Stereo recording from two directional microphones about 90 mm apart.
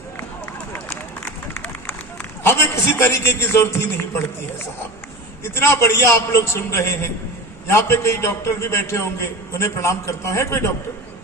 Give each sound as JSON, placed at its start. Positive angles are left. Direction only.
{"t": 1.5, "sound": "run", "side_deg": 25}
{"t": 2.4, "sound": "a man's voice", "side_deg": 25}
{"t": 5.4, "sound": "a man's voice", "side_deg": 25}